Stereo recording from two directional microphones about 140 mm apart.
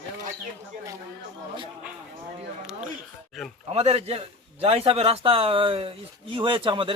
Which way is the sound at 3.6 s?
45° right (ahead or behind).